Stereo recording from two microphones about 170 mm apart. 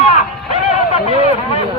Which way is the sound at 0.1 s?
40° left (ahead or behind).